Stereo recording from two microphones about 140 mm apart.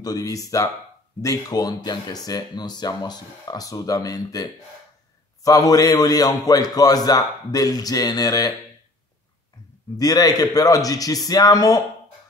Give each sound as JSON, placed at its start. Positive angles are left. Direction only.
{"t": 0.0, "sound": "speech", "side_deg": 25}
{"t": 9.9, "sound": "speech", "side_deg": 25}